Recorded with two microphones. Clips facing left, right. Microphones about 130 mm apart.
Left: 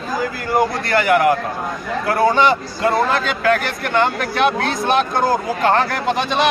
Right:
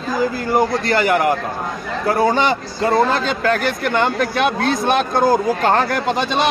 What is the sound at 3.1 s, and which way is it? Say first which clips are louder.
Speech: left 1 dB; 35° right (ahead or behind).